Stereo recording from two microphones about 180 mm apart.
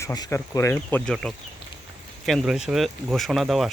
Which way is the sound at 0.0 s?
20° left (ahead or behind).